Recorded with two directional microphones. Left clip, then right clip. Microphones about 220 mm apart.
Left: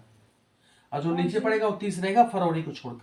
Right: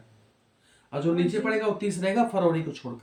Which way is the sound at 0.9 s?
15° left (ahead or behind).